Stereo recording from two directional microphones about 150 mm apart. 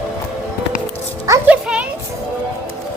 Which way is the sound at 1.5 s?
5° right (ahead or behind).